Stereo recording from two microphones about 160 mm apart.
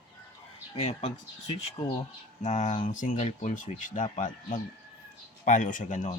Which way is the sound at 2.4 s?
45° left (ahead or behind).